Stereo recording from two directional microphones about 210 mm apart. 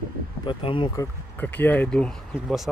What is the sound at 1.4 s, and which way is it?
Speech, 10° left (ahead or behind).